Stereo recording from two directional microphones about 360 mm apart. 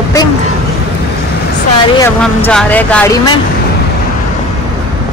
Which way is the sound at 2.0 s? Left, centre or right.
Centre.